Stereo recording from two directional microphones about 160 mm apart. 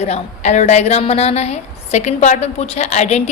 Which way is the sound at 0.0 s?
45° left (ahead or behind).